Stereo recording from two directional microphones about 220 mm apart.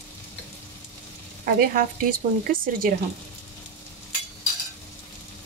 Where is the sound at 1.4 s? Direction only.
40° right (ahead or behind).